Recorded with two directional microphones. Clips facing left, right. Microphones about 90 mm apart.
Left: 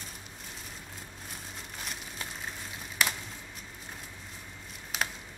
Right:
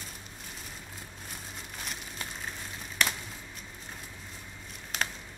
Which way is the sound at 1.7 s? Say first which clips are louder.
Even; centre (ahead or behind).